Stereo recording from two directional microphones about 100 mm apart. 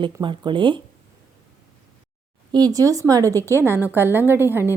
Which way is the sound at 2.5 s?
40° right (ahead or behind).